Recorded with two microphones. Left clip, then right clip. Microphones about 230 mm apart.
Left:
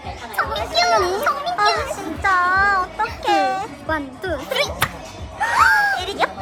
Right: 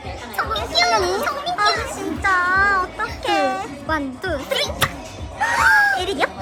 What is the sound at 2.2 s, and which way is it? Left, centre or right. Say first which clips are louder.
Music: left 1 dB; centre.